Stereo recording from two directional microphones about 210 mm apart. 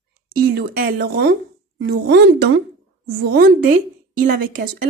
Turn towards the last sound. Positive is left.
turn(degrees=-45)  # may be behind; listen again after turning